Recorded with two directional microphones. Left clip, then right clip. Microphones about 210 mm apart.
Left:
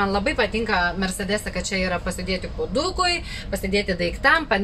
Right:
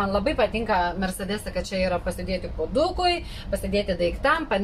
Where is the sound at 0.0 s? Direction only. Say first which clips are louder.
Left 1 dB; 10° left (ahead or behind).